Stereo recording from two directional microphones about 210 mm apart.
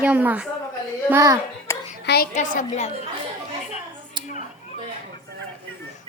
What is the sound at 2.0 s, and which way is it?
Speech, 50° left (ahead or behind).